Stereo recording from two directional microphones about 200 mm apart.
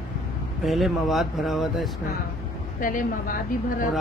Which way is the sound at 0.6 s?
Centre (ahead or behind).